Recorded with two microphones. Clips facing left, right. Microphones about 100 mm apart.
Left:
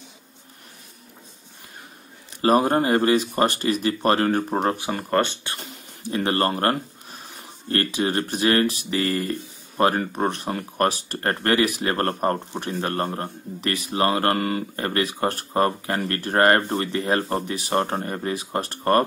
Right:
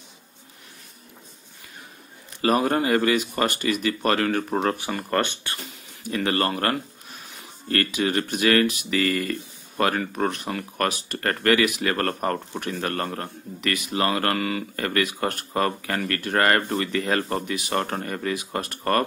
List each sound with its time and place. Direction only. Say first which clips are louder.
2.4 s speech: left 3 dB; 35° left (ahead or behind)
6.0 s speech: left 2 dB; 30° left (ahead or behind)